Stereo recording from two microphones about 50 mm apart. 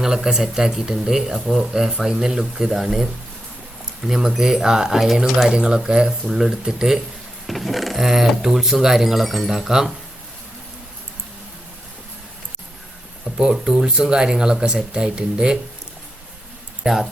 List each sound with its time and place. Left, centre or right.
0.0 s speech: centre
5.5 s speech: centre
13.2 s speech: centre
16.8 s speech: centre